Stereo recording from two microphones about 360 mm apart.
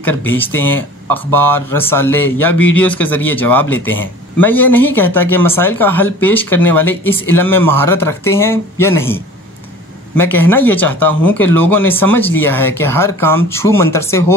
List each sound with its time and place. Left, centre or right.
0.0 s speech: centre
2.6 s a man's voice: left
2.9 s speech: centre